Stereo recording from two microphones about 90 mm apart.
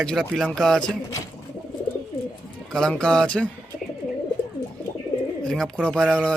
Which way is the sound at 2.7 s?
5° left (ahead or behind).